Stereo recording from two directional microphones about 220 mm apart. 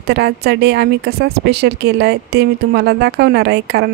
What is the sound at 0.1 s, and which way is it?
A woman's voice, 50° right (ahead or behind).